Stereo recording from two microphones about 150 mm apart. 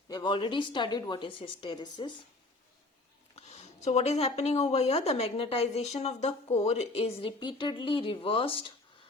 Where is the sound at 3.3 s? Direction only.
45° left (ahead or behind).